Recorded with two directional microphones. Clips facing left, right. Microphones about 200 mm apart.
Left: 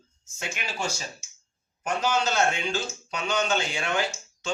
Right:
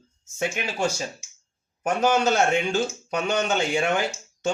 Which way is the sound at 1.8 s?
55° right (ahead or behind).